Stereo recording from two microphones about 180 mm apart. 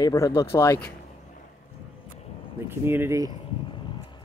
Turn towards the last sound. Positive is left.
turn(degrees=-15)  # may be behind; listen again after turning